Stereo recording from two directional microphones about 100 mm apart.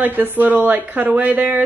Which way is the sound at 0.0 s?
20° right (ahead or behind).